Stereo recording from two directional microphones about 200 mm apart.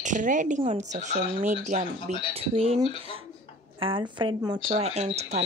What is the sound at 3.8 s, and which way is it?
Speech, 25° right (ahead or behind).